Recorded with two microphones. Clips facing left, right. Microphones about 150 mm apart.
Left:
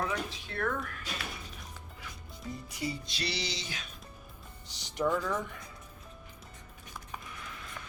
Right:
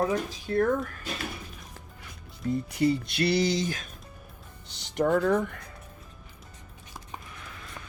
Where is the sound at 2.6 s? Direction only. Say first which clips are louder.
Right 12 dB; 60° right (ahead or behind).